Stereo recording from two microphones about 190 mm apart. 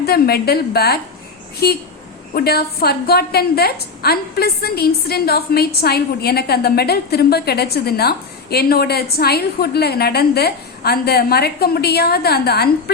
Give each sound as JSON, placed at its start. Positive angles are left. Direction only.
{"t": 0.0, "sound": "a woman's voice", "side_deg": 55}